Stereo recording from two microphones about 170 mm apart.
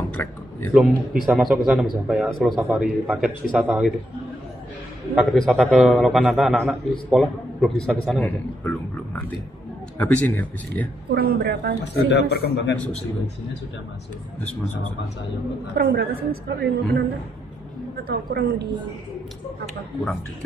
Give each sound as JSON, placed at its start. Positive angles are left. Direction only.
{"t": 0.1, "sound": "a sound", "side_deg": 10}
{"t": 0.7, "sound": "a man's voice", "side_deg": 0}
{"t": 5.1, "sound": "a man's voice", "side_deg": 0}
{"t": 9.9, "sound": "speech", "side_deg": 10}
{"t": 11.1, "sound": "a woman's voice", "side_deg": -75}
{"t": 11.8, "sound": "speech", "side_deg": 90}
{"t": 14.4, "sound": "speech", "side_deg": 5}
{"t": 15.7, "sound": "a woman's voice", "side_deg": -75}
{"t": 18.0, "sound": "a woman's voice", "side_deg": -65}